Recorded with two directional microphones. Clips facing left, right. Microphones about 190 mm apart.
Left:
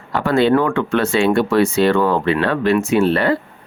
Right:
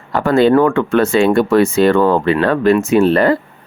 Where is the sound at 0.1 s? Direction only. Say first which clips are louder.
Right 3 dB; 45° right (ahead or behind).